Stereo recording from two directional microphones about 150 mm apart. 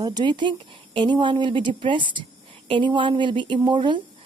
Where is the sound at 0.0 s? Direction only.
30° right (ahead or behind).